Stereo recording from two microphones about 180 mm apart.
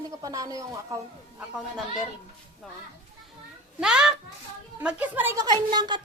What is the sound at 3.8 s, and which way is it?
A child's voice, 5° right (ahead or behind).